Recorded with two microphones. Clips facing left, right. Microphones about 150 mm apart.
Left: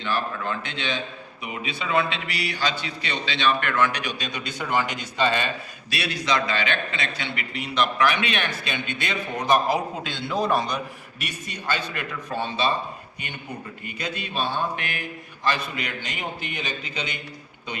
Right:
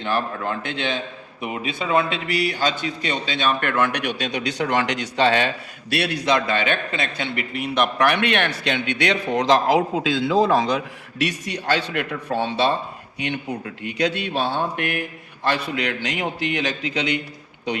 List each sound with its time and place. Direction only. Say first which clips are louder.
0.0 s a man's voice: right 3 dB; 50° right (ahead or behind); by 5.5 s 75° right (ahead or behind)
5.9 s a man's voice: right 5 dB; 60° right (ahead or behind)
13.1 s a man's voice: right 13 dB; 90° right; by 15.0 s 55° right (ahead or behind)
15.4 s a man's voice: right 4 dB; 70° right (ahead or behind); by 17.2 s 85° right